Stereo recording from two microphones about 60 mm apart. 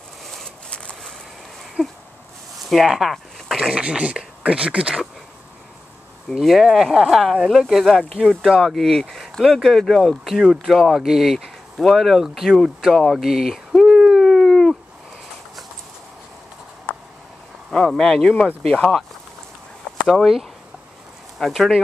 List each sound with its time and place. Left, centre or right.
0.2 s a sound: centre
0.7 s a sound: centre
1.8 s speech: centre
2.6 s speech: centre
3.7 s speech: centre
6.3 s speech: centre
13.0 s a sound: centre
17.7 s speech: centre
20.1 s speech: centre